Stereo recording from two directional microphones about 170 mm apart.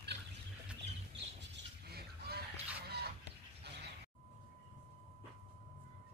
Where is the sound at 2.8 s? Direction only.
70° right (ahead or behind).